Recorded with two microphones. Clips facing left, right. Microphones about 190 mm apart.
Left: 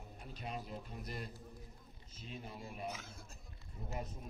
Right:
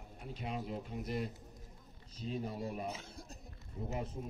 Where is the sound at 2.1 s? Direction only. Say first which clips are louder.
Right 9 dB; 35° right (ahead or behind).